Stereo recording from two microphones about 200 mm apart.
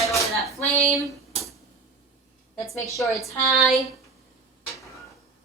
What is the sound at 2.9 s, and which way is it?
Speech, 15° left (ahead or behind).